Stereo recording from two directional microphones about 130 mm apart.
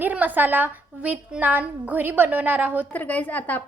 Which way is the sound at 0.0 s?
10° right (ahead or behind).